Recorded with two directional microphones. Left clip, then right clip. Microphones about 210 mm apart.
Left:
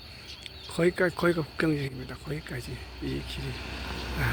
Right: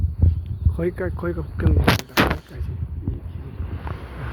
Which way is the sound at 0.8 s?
5° right (ahead or behind).